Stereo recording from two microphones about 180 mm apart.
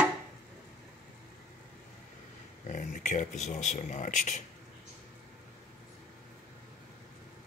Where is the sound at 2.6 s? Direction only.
45° left (ahead or behind).